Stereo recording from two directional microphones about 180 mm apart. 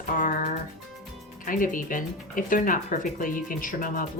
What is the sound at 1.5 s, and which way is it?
Speech, 50° left (ahead or behind).